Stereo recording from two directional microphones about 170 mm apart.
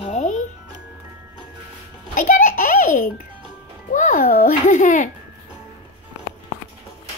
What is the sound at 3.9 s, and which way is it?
A child's voice, 50° left (ahead or behind).